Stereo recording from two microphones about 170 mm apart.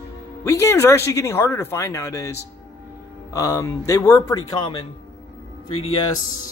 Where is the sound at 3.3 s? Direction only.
20° left (ahead or behind).